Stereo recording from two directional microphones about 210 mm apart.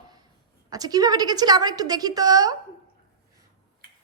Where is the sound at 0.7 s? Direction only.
20° right (ahead or behind).